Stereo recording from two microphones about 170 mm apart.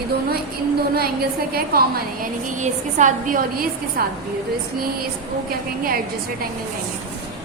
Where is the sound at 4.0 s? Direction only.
60° right (ahead or behind).